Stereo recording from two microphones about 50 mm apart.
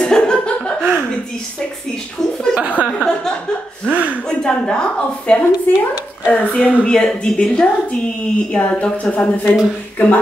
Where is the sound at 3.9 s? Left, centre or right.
Right.